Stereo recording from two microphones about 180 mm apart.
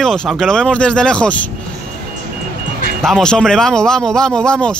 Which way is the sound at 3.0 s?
5° left (ahead or behind).